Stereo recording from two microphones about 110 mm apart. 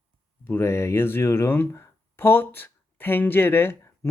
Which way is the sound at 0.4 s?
20° left (ahead or behind).